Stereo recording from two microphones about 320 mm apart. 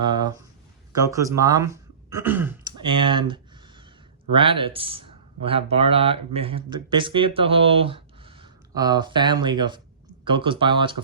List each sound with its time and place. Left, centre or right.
0.0 s speech: centre